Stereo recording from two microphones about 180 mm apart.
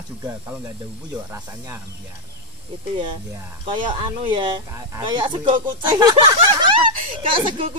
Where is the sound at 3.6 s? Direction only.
25° right (ahead or behind).